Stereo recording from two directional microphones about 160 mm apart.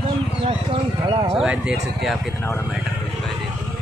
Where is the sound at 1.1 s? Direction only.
30° right (ahead or behind).